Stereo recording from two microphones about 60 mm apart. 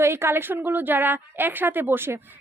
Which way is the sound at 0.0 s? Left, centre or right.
Right.